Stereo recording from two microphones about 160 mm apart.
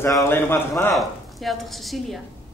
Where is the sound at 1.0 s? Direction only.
Centre (ahead or behind).